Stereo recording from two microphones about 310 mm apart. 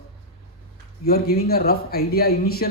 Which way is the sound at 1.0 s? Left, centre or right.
Left.